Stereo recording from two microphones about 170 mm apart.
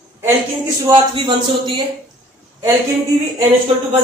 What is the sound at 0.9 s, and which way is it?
Speech, 30° right (ahead or behind).